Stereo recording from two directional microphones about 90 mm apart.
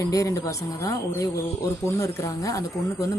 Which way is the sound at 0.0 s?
40° left (ahead or behind).